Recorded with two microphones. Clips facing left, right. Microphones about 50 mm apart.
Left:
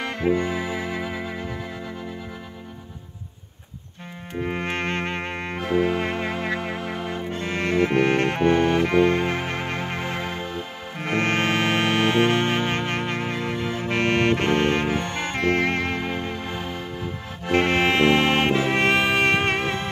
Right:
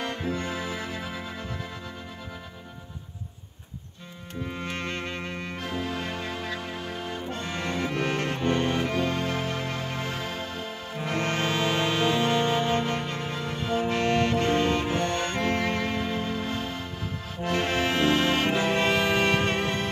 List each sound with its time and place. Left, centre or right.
0.3 s music: centre
4.4 s music: left
5.8 s music: left
10.0 s music: centre
11.0 s music: left
15.0 s music: centre
15.3 s music: left
16.3 s music: centre
17.5 s music: left
18.8 s music: left